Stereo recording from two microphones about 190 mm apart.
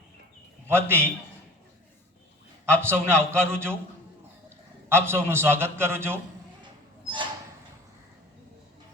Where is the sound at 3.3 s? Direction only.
15° right (ahead or behind).